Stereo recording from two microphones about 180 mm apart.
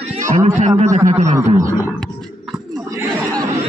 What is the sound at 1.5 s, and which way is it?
Speech, 15° right (ahead or behind).